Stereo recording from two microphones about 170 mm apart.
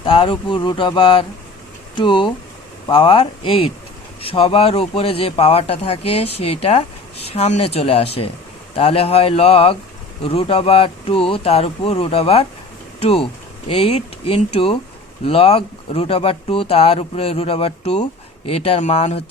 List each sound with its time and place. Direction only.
0.0 s speech: 30° left (ahead or behind)